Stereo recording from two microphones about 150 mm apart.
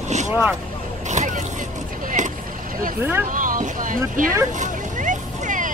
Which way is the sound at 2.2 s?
55° right (ahead or behind).